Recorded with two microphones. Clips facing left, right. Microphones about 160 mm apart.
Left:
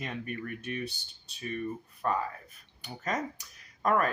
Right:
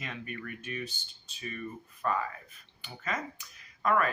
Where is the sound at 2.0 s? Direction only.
30° left (ahead or behind).